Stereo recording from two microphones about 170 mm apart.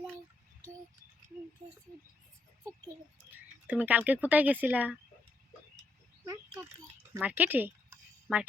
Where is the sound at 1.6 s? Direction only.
20° right (ahead or behind).